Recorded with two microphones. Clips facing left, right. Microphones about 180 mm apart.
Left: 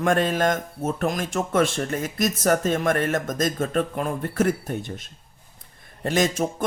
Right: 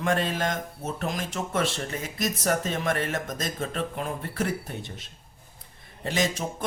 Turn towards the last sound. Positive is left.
turn(degrees=50)  # may be behind; listen again after turning